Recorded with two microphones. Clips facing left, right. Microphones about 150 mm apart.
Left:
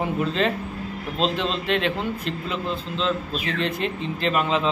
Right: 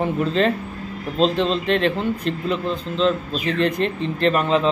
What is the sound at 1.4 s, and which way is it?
Speech, centre (ahead or behind).